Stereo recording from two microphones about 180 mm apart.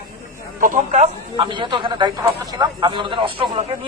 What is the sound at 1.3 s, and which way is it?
Speech, 25° right (ahead or behind).